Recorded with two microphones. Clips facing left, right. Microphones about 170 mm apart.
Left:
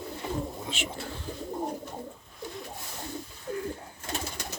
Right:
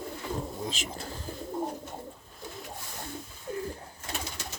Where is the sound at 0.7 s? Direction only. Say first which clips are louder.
Left 2 dB; 40° right (ahead or behind).